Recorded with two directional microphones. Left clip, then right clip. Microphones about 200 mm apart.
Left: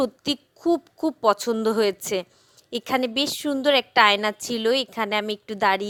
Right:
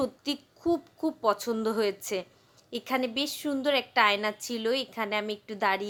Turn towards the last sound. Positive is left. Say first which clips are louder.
# left 6 dB
turn(degrees=40)  # may be behind; listen again after turning